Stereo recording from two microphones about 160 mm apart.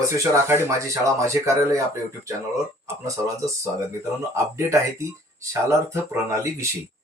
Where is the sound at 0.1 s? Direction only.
15° right (ahead or behind).